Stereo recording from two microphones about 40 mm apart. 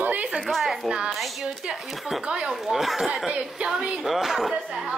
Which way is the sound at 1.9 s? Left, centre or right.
Centre.